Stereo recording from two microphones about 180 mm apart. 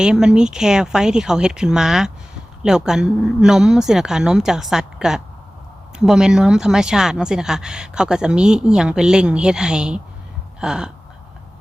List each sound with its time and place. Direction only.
0.0 s speech: 5° right (ahead or behind)